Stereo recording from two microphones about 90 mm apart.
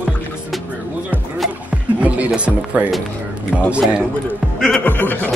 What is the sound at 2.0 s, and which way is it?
Music, 15° right (ahead or behind).